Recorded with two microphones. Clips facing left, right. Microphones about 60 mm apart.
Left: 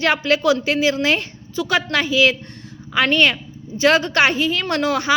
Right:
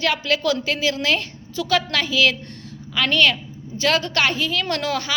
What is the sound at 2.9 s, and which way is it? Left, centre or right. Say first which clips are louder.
A woman's voice: left 2 dB; left.